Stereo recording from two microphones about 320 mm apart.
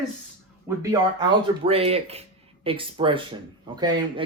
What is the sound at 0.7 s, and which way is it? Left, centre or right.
Speech, centre.